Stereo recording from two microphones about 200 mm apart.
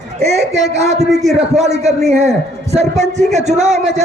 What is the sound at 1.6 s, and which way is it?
A man's voice, 35° right (ahead or behind).